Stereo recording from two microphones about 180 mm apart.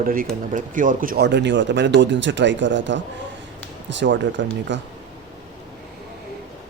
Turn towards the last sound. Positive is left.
turn(degrees=-85)